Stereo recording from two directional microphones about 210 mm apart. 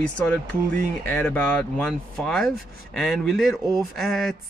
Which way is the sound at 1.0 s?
5° left (ahead or behind).